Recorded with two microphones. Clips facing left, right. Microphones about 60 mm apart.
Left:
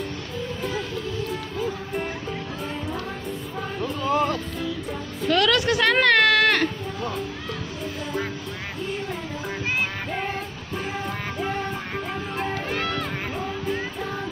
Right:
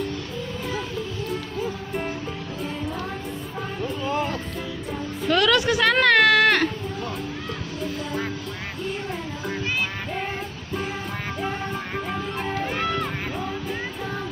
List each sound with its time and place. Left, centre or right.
4.1 s music: left
5.3 s a sound: centre
11.9 s music: centre